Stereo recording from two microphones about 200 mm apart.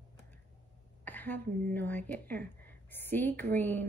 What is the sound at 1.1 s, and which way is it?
Speech, 10° left (ahead or behind).